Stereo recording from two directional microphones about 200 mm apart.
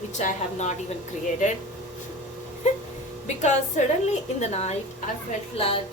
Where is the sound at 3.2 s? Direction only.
35° left (ahead or behind).